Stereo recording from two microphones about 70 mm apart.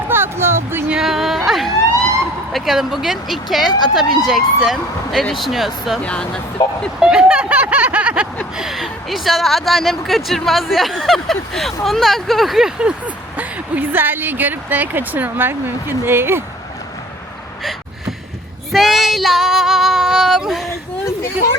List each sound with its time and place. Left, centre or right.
0.1 s a sound: right
0.9 s a sound: centre
1.5 s emergency vehicle: centre
2.5 s speech: centre
3.7 s speech: left
3.9 s speech: centre
6.0 s speech: centre
7.0 s speech: centre
8.5 s speech: centre
13.3 s a woman's voice: right
18.7 s speech: centre